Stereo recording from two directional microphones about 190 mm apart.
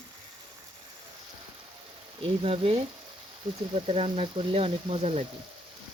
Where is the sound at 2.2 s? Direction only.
30° right (ahead or behind).